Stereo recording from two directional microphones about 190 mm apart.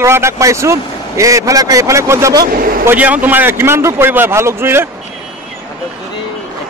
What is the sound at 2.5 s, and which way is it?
Speech, 50° right (ahead or behind).